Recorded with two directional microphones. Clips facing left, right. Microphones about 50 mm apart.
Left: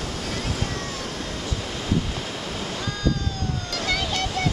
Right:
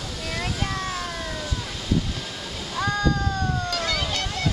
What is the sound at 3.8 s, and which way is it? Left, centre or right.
Waves, centre.